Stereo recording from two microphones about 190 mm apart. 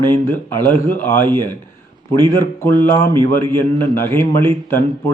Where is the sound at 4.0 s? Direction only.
15° left (ahead or behind).